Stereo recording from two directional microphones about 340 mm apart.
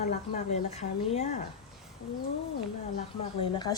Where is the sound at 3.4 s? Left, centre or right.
Centre.